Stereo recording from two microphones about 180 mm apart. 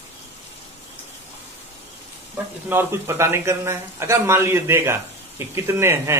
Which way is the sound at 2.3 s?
10° right (ahead or behind).